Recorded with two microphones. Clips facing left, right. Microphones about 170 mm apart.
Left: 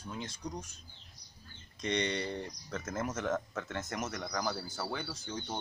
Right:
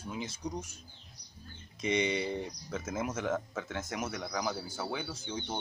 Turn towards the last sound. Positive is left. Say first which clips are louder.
# right 2 dB
turn(degrees=0)  # may be behind; listen again after turning